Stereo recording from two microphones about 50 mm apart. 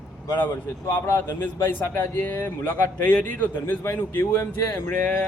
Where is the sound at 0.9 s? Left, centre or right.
Left.